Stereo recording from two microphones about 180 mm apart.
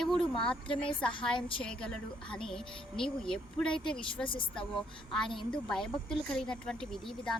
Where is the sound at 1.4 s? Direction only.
30° left (ahead or behind).